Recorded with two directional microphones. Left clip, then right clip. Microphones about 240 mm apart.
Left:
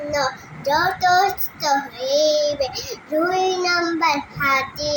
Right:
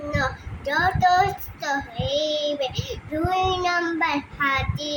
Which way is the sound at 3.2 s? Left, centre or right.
Centre.